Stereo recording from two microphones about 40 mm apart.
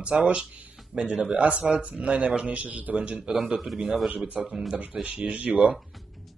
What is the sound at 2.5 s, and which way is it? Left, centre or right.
Speech, right.